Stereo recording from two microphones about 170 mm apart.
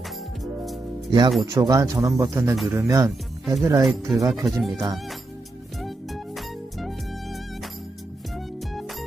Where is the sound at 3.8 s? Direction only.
Centre (ahead or behind).